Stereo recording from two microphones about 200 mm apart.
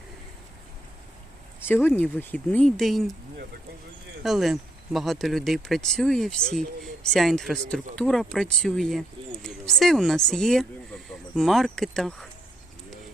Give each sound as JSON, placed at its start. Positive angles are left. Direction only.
{"t": 1.6, "sound": "speech", "side_deg": 10}
{"t": 4.2, "sound": "speech", "side_deg": 0}